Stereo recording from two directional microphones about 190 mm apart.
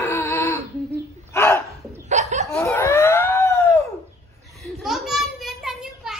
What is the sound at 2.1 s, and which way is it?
Chuckle, 40° right (ahead or behind).